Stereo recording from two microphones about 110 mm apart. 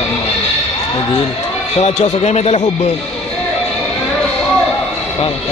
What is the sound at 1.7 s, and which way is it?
A man's voice, 80° left.